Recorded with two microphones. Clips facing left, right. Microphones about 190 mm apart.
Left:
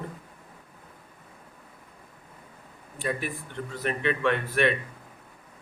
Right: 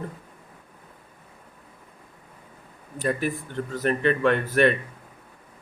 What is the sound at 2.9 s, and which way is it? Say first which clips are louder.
Speech: right 5 dB; 40° right (ahead or behind).